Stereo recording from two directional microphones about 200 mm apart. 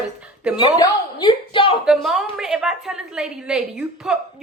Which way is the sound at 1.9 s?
Centre (ahead or behind).